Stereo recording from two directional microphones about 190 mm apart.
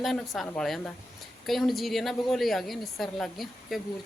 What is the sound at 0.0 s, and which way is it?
A woman's voice, centre (ahead or behind).